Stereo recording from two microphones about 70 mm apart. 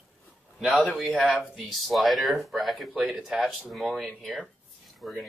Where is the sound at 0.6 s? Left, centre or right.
Centre.